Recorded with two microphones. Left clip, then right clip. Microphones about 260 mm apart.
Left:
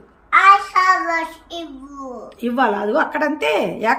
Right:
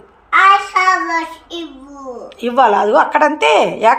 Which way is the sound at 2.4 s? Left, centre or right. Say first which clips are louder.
Right 7 dB; centre.